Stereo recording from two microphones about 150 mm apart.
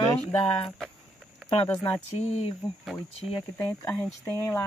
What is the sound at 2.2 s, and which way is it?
Speech, 45° left (ahead or behind).